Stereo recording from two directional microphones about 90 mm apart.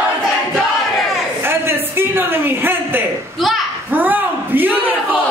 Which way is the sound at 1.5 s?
25° right (ahead or behind).